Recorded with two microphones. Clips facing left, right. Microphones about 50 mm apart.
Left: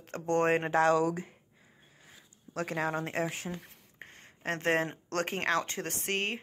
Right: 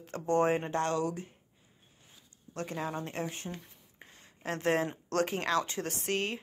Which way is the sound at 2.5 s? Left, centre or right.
Left.